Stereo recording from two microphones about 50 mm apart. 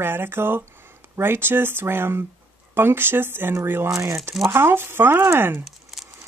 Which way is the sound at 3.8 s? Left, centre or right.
Right.